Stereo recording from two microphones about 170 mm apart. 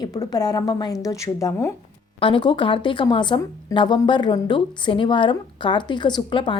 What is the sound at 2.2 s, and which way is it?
A woman's voice, 30° left (ahead or behind).